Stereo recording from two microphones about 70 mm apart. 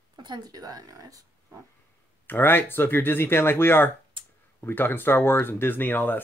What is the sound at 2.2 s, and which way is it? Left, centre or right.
Speech, left.